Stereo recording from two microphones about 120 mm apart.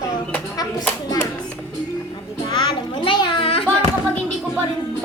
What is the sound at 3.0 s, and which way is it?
Children playing, 45° left (ahead or behind).